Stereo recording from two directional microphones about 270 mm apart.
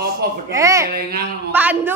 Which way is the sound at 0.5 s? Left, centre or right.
Centre.